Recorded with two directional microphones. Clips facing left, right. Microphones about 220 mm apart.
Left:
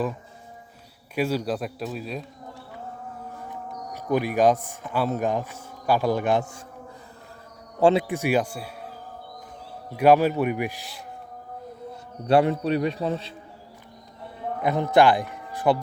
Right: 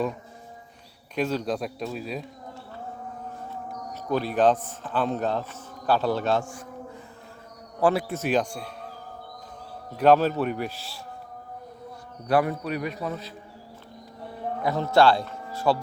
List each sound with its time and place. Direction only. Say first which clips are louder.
1.1 s speech: left 1 dB; 10° left (ahead or behind)
3.5 s speech: even; 15° left (ahead or behind)
7.8 s a man's voice: left 4 dB; 25° left (ahead or behind); by 8.9 s 5° left (ahead or behind)
9.9 s a man's voice: left 1 dB; 10° left (ahead or behind)
12.3 s a man's voice: left 4 dB; 25° left (ahead or behind)
14.6 s speech: left 1 dB; 20° left (ahead or behind)